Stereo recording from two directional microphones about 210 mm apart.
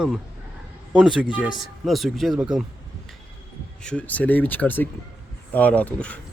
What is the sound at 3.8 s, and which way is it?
Speech, 5° left (ahead or behind).